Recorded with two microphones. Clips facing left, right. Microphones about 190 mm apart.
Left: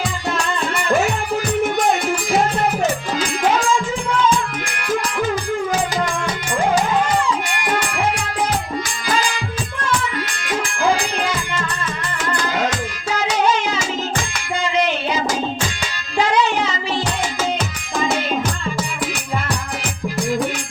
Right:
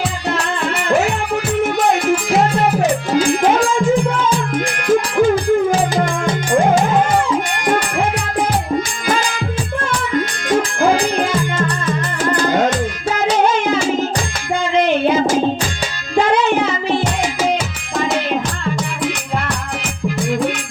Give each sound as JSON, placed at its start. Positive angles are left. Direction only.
{"t": 4.9, "sound": "music", "side_deg": -50}
{"t": 6.5, "sound": "music", "side_deg": -50}
{"t": 10.2, "sound": "music", "side_deg": -50}